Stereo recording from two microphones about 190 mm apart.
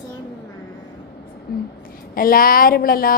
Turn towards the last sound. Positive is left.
turn(degrees=50)  # may be behind; listen again after turning